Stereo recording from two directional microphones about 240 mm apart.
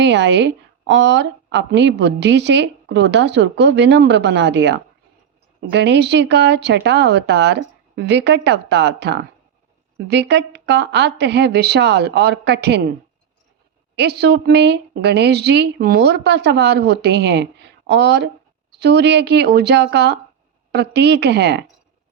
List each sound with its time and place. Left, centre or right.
0.0 s a woman's voice: right
13.9 s a woman's voice: right